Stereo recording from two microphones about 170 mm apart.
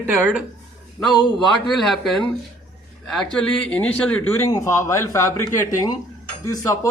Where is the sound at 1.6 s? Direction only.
Centre (ahead or behind).